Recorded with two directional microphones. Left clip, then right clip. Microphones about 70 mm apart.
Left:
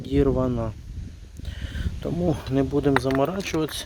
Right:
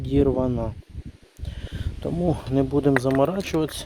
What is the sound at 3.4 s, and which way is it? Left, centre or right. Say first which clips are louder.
Speech: right 1 dB; right.